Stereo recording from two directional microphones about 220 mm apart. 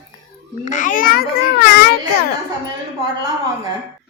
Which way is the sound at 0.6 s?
35° left (ahead or behind).